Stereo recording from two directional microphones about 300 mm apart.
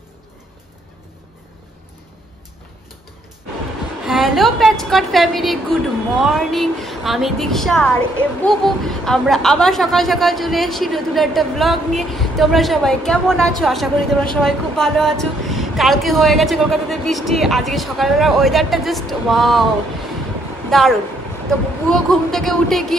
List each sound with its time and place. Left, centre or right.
4.0 s speech: centre
20.7 s speech: centre